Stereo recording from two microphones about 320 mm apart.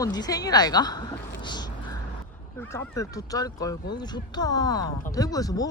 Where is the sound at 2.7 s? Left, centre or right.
Centre.